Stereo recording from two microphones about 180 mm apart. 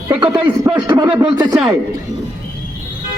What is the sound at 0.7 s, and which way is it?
Speech, 25° right (ahead or behind).